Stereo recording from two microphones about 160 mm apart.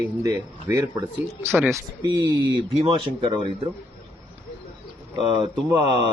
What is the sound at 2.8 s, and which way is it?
Speech, 35° right (ahead or behind).